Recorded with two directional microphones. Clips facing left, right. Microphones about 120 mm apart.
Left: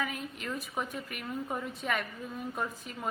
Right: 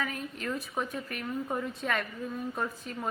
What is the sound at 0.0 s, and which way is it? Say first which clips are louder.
A woman's voice: right 1 dB; 10° left (ahead or behind).